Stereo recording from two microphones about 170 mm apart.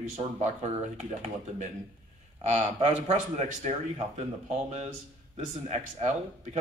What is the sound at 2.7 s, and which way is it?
Speech, 45° right (ahead or behind).